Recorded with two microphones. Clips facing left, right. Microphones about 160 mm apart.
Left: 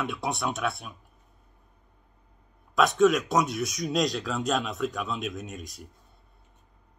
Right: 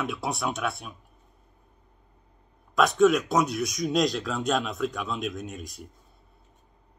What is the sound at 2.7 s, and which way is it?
Speech, centre (ahead or behind).